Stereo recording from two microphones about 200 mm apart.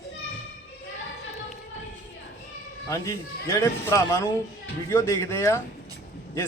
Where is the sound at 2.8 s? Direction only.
15° left (ahead or behind).